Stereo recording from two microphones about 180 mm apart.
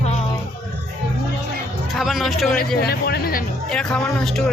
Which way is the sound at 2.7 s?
60° left (ahead or behind).